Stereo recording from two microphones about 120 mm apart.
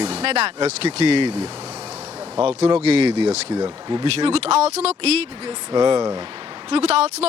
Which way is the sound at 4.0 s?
55° right (ahead or behind).